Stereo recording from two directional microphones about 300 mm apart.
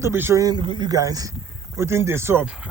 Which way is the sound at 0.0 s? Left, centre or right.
Centre.